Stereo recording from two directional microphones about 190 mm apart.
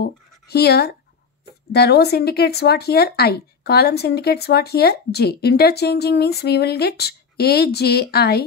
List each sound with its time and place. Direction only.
0.0 s speech: 55° left (ahead or behind)